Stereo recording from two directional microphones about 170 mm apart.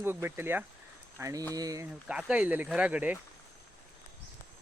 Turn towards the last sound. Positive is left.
turn(degrees=-10)  # may be behind; listen again after turning